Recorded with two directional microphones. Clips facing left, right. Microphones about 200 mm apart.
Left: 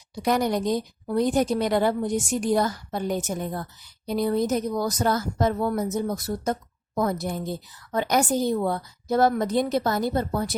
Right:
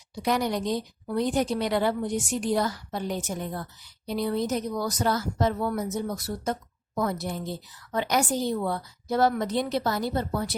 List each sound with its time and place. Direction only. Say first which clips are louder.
0.2 s a woman's voice: left 3 dB; 45° left (ahead or behind)